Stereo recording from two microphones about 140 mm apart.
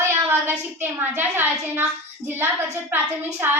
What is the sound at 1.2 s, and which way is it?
Child singing, 15° right (ahead or behind).